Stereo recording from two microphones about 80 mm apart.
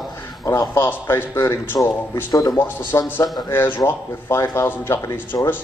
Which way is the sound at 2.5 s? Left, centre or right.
Left.